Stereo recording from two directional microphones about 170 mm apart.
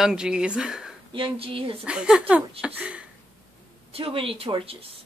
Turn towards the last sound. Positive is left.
turn(degrees=-35)  # may be behind; listen again after turning